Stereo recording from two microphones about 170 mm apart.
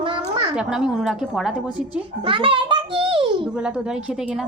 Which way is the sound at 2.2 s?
30° right (ahead or behind).